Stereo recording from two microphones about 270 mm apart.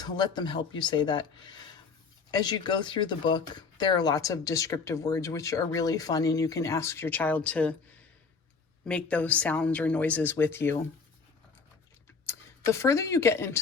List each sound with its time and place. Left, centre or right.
0.0 s speech: centre
2.3 s speech: centre
8.9 s a woman's voice: centre
12.2 s speech: centre